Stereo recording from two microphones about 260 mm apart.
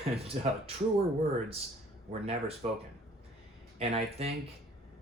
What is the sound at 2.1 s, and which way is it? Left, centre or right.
Speech, right.